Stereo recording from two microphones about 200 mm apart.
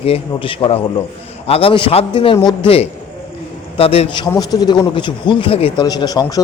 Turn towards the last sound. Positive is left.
turn(degrees=20)  # may be behind; listen again after turning